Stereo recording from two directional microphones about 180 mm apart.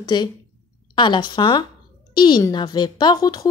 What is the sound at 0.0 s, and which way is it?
A woman's voice, 25° left (ahead or behind).